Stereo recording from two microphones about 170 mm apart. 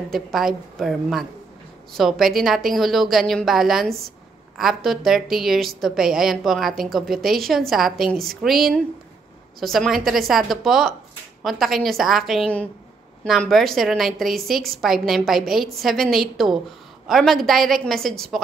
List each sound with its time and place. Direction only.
0.1 s a woman's voice: centre (ahead or behind)